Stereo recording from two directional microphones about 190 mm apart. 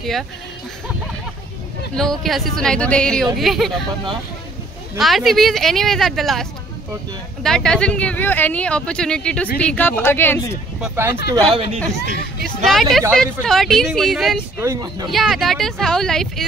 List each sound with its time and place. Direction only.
2.0 s speech: centre (ahead or behind)
4.9 s speech: centre (ahead or behind)
7.4 s speech: 5° left (ahead or behind)
11.0 s speech: 10° right (ahead or behind)
11.4 s speech: 30° right (ahead or behind)
12.6 s speech: centre (ahead or behind)
14.6 s speech: 15° right (ahead or behind)
15.0 s speech: centre (ahead or behind)